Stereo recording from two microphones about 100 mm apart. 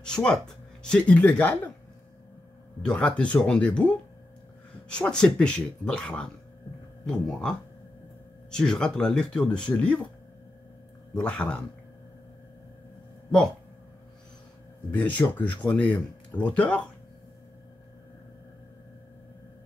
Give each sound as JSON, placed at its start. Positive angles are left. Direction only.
{"t": 0.0, "sound": "speech", "side_deg": 10}
{"t": 2.8, "sound": "speech", "side_deg": 10}
{"t": 11.1, "sound": "speech", "side_deg": 10}
{"t": 15.0, "sound": "speech", "side_deg": 15}